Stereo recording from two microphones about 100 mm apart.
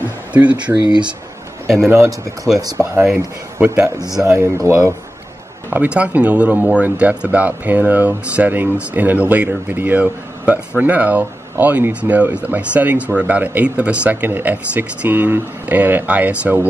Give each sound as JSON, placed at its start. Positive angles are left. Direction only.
{"t": 0.3, "sound": "speech", "side_deg": -15}
{"t": 0.8, "sound": "speech", "side_deg": -45}
{"t": 1.9, "sound": "speech", "side_deg": -30}
{"t": 3.5, "sound": "a man's voice", "side_deg": -15}
{"t": 3.8, "sound": "speech", "side_deg": -35}
{"t": 5.7, "sound": "speech", "side_deg": -15}